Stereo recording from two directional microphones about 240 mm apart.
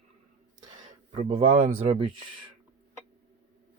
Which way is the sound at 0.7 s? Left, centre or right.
Right.